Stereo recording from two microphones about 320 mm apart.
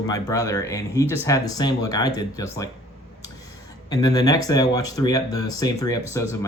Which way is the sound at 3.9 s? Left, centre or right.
Centre.